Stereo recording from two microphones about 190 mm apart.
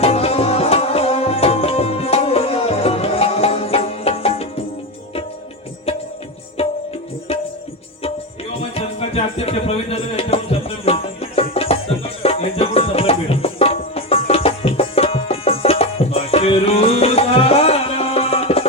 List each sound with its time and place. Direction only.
0.0 s tabla: 30° left (ahead or behind)
6.6 s tabla: 30° left (ahead or behind)
8.7 s music: 30° left (ahead or behind)